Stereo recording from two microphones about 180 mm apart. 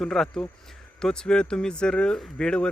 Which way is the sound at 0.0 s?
Centre (ahead or behind).